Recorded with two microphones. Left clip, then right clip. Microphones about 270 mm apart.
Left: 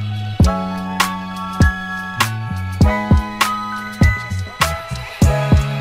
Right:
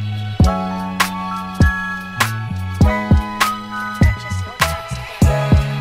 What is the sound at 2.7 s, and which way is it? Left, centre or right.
Music, centre.